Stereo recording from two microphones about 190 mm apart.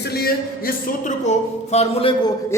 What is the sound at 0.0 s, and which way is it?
Speech, 55° left (ahead or behind).